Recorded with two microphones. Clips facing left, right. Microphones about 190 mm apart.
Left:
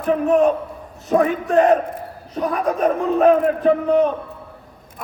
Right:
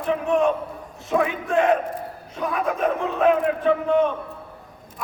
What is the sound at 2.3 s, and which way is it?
Speech, 40° left (ahead or behind).